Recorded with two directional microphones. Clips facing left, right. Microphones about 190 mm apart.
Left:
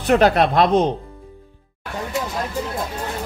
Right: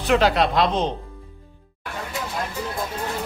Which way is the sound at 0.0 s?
50° left (ahead or behind).